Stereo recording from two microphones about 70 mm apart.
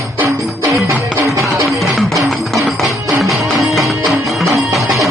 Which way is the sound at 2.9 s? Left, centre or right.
Right.